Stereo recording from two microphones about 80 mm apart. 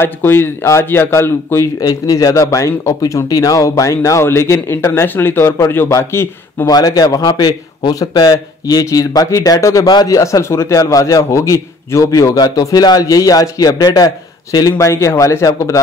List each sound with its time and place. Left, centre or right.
0.0 s a man's voice: left
1.8 s a man's voice: left
5.9 s a man's voice: left
12.4 s a man's voice: left
14.7 s a man's voice: left